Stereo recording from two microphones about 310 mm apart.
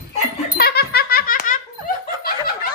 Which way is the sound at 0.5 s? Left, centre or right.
Left.